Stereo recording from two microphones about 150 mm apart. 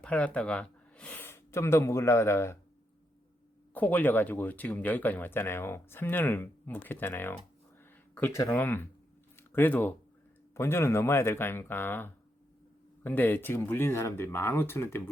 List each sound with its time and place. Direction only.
0.0 s speech: 10° left (ahead or behind)
3.8 s speech: 10° left (ahead or behind)
9.3 s a sound: 15° left (ahead or behind)
10.5 s speech: 15° left (ahead or behind)